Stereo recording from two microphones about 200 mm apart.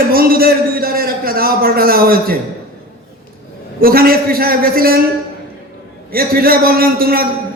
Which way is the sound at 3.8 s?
45° right (ahead or behind).